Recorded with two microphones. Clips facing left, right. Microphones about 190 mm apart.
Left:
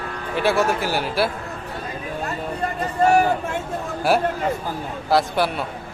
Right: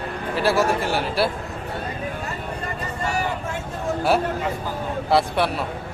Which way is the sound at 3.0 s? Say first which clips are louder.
Left 11 dB; 60° left (ahead or behind).